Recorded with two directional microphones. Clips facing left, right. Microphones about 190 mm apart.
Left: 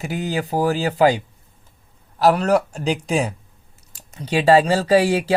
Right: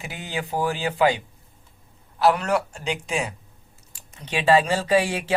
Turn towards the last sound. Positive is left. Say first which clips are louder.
# left 5 dB
turn(degrees=40)  # may be behind; listen again after turning